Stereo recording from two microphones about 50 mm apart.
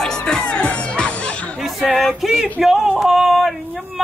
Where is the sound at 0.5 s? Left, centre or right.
Left.